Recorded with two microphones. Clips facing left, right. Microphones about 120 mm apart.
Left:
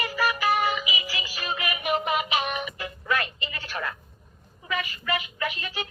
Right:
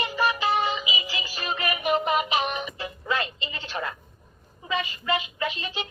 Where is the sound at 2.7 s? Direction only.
25° right (ahead or behind).